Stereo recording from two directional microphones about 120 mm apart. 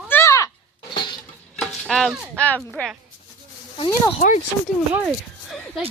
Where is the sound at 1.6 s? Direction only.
Centre (ahead or behind).